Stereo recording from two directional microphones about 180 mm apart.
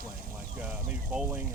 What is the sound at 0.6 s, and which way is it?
Speech, 5° right (ahead or behind).